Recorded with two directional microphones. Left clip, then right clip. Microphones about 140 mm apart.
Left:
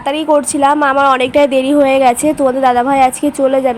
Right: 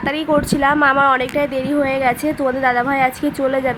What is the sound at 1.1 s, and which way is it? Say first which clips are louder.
A woman's voice: left 8 dB; 45° left (ahead or behind).